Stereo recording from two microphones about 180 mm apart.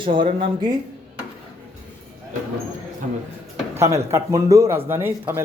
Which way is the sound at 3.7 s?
15° right (ahead or behind).